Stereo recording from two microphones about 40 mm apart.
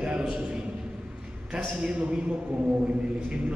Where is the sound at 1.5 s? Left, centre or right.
Right.